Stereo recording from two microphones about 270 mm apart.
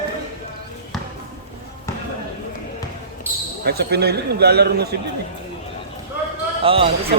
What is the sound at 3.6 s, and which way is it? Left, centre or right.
Speech, right.